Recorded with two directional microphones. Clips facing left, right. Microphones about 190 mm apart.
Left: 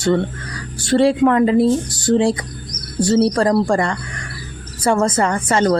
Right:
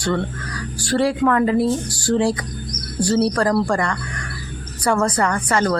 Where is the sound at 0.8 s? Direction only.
25° left (ahead or behind).